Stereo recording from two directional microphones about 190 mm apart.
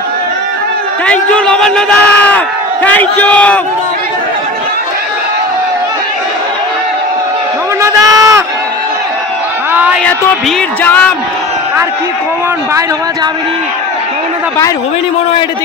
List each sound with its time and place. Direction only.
1.0 s speech: 5° left (ahead or behind)
7.8 s a sound: 15° right (ahead or behind)
10.8 s speech: 10° left (ahead or behind)